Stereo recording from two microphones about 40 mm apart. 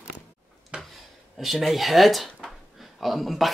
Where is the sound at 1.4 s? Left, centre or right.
Centre.